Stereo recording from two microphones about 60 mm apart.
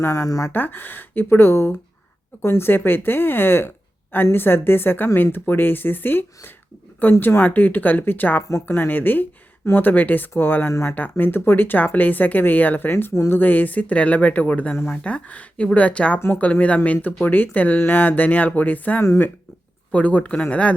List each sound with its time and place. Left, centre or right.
0.0 s speech: left
0.5 s speech: left
10.7 s speech: left
10.9 s speech: left